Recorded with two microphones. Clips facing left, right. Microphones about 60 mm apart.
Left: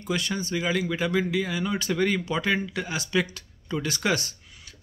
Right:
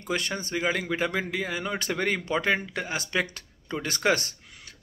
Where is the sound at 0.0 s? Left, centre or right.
Right.